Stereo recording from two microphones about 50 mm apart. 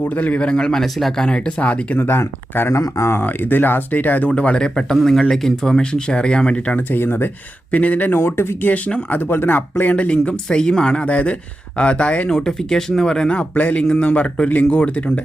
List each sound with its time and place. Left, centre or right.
0.0 s speech: left
0.3 s speech: centre
1.3 s speech: left
2.0 s speech: left
2.7 s speech: left
3.2 s speech: left; by 4.9 s centre
4.9 s speech: centre
6.7 s speech: left
7.7 s speech: left
9.9 s speech: left
11.0 s speech: left
12.3 s speech: centre; by 15.2 s left